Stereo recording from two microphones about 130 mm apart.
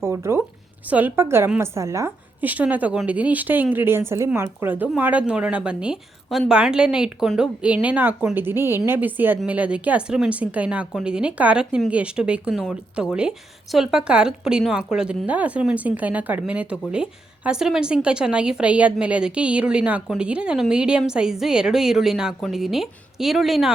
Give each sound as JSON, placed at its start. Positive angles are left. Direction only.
{"t": 0.0, "sound": "a sound", "side_deg": -20}
{"t": 0.9, "sound": "a woman's voice", "side_deg": -15}
{"t": 6.2, "sound": "a woman's voice", "side_deg": 10}
{"t": 6.5, "sound": "a woman's voice", "side_deg": -5}